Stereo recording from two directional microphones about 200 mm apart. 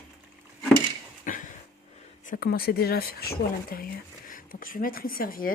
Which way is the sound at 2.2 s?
45° left (ahead or behind).